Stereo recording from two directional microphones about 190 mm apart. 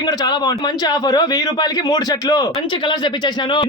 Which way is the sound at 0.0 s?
20° left (ahead or behind).